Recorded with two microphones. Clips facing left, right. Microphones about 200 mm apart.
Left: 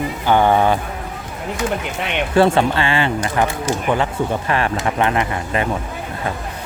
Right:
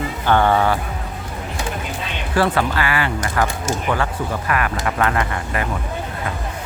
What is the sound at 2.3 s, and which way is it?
Speech, 25° left (ahead or behind).